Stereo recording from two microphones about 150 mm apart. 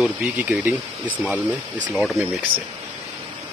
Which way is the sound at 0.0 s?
5° right (ahead or behind).